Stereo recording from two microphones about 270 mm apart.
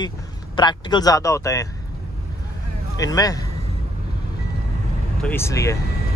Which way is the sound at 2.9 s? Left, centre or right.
Centre.